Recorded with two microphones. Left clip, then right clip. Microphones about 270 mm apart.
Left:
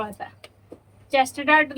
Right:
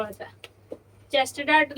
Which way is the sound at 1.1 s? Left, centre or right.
Centre.